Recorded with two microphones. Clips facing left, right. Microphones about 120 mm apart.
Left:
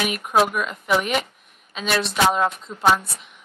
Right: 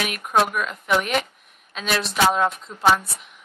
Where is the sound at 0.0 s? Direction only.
Centre (ahead or behind).